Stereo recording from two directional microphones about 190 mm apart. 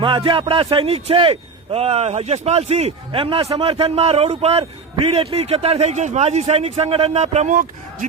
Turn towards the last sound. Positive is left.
turn(degrees=-40)  # may be behind; listen again after turning